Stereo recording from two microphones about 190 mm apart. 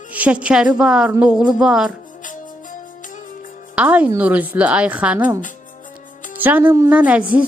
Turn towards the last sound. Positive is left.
turn(degrees=-5)  # may be behind; listen again after turning